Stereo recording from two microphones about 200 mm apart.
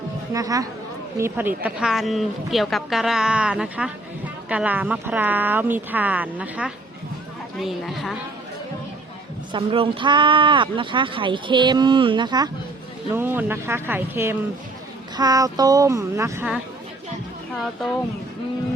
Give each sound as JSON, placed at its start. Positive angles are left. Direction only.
{"t": 0.3, "sound": "a woman's voice", "side_deg": -15}
{"t": 9.5, "sound": "speech", "side_deg": -25}
{"t": 13.1, "sound": "speech", "side_deg": -10}
{"t": 17.5, "sound": "a woman's voice", "side_deg": 0}